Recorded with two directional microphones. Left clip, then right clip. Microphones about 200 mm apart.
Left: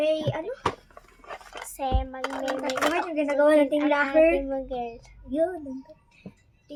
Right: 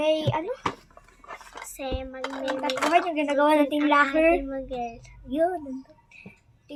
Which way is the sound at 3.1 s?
55° right (ahead or behind).